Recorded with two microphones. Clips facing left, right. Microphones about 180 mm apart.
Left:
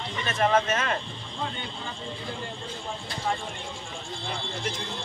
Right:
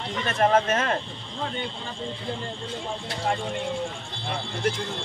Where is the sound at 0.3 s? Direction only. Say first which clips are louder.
Right 2 dB; 35° right (ahead or behind).